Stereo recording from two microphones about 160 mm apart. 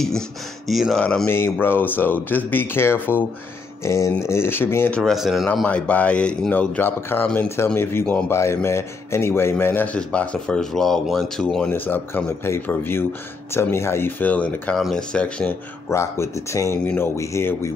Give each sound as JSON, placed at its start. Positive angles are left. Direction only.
{"t": 0.7, "sound": "speech", "side_deg": 0}
{"t": 15.9, "sound": "speech", "side_deg": 20}